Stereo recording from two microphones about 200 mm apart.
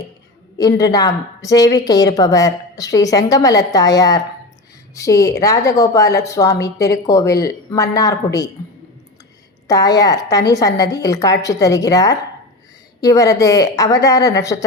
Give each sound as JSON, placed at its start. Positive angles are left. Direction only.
{"t": 0.6, "sound": "a woman's voice", "side_deg": 20}
{"t": 9.6, "sound": "a woman's voice", "side_deg": 20}